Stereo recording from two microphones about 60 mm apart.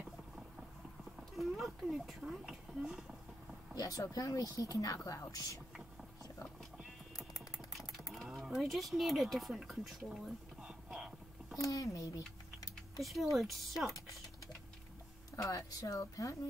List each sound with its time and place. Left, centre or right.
1.3 s speech: centre
3.7 s speech: left
5.3 s speech: left
7.2 s typing: left
8.1 s speech: centre
11.5 s speech: left
12.5 s typing: left
13.0 s speech: centre
15.3 s speech: left